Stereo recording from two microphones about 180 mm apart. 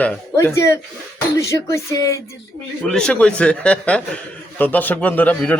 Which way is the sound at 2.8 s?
5° left (ahead or behind).